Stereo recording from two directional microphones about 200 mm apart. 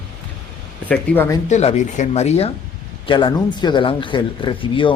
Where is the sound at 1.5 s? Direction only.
35° left (ahead or behind).